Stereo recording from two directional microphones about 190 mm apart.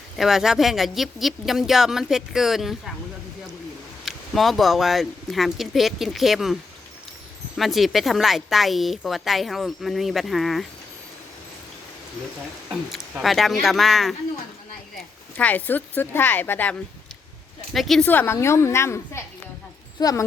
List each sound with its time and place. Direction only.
0.2 s speech: centre (ahead or behind)
4.0 s speech: centre (ahead or behind)
12.6 s speech: centre (ahead or behind)
15.4 s a woman's voice: 10° left (ahead or behind)
17.7 s a woman's voice: centre (ahead or behind); by 20.2 s 20° left (ahead or behind)